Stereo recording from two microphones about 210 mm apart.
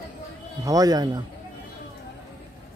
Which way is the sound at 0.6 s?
15° right (ahead or behind).